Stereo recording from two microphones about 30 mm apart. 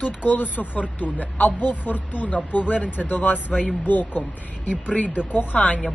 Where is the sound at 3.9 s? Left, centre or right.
Left.